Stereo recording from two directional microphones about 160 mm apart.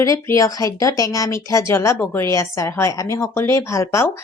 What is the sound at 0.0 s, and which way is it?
Speech, 20° left (ahead or behind).